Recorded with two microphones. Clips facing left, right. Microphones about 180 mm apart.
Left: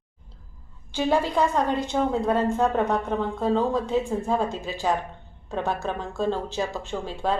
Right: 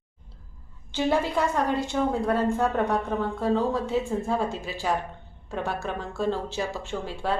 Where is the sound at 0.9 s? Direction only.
15° left (ahead or behind).